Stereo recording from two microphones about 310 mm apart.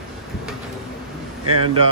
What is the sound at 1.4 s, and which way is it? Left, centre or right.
Speech, right.